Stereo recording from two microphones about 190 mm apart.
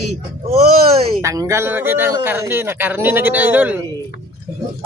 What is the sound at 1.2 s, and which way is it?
Speech, 15° right (ahead or behind).